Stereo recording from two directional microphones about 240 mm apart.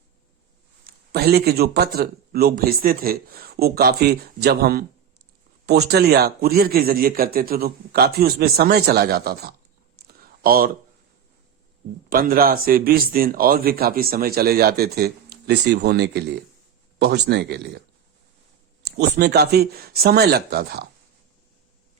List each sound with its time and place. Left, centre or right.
0.9 s a man's voice: right
10.1 s a sound: right
12.0 s a man's voice: right